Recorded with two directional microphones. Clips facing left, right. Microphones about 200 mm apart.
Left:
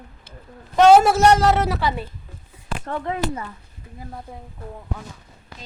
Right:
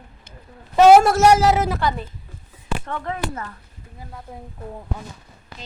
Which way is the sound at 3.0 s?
10° left (ahead or behind).